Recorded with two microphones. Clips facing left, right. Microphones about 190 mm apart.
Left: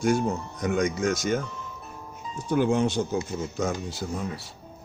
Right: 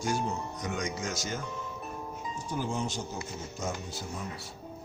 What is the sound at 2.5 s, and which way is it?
A man's voice, 70° left (ahead or behind).